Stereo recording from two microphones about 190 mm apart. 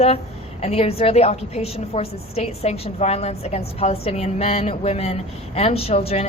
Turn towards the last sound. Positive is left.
turn(degrees=30)  # may be behind; listen again after turning